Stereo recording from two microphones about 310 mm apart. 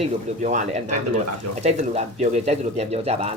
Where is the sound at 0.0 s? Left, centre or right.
Right.